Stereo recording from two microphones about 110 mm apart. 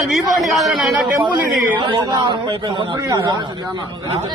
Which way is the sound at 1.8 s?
45° right (ahead or behind).